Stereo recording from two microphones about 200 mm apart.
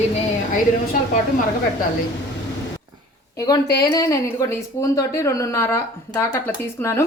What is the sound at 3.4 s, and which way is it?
A woman's voice, 20° left (ahead or behind).